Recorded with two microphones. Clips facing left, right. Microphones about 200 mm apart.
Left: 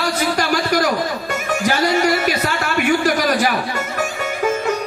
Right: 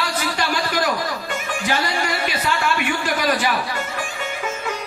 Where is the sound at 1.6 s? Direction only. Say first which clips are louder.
Left 7 dB; 40° left (ahead or behind).